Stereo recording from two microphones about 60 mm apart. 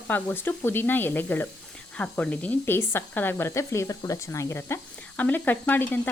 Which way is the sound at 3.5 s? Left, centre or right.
Left.